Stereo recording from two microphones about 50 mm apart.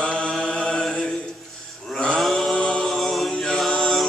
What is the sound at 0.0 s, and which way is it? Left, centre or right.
Mantra, left.